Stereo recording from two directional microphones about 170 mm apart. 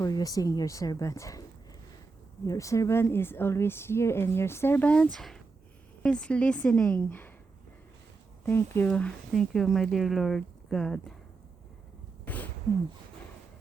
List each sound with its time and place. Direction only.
0.0 s speech: 20° left (ahead or behind)
8.4 s speech: 10° left (ahead or behind)
12.2 s a sound: 10° left (ahead or behind)